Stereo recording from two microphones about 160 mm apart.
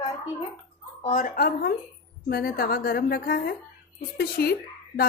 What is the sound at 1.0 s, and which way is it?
A woman's voice, 50° left (ahead or behind).